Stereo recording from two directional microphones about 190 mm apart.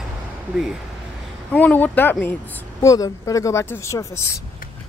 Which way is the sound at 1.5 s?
10° left (ahead or behind).